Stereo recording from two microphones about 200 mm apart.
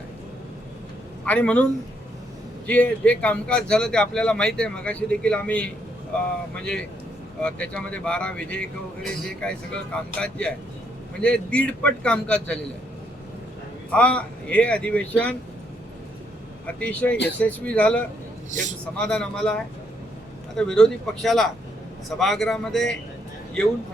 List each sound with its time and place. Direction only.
1.2 s a man's voice: 5° left (ahead or behind)
2.6 s speech: 5° left (ahead or behind)
13.9 s speech: 5° left (ahead or behind)
16.6 s speech: 5° left (ahead or behind)
18.5 s a man's voice: 40° right (ahead or behind)
18.9 s speech: 5° left (ahead or behind)
20.6 s speech: 5° left (ahead or behind)